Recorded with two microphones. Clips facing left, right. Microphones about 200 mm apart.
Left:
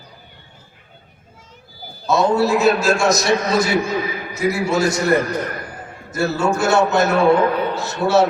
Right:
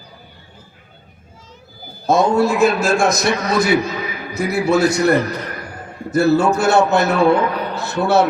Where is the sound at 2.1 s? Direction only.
50° right (ahead or behind).